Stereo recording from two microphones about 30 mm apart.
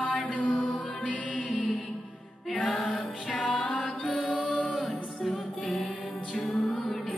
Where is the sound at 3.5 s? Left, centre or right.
Left.